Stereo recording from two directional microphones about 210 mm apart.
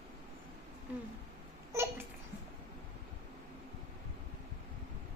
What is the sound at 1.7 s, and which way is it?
Babbling, 10° right (ahead or behind).